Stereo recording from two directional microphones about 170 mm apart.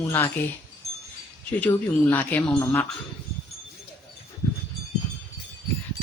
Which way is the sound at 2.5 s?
20° left (ahead or behind).